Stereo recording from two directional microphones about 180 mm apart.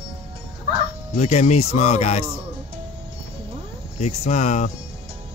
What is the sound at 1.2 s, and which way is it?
Speech, 40° left (ahead or behind).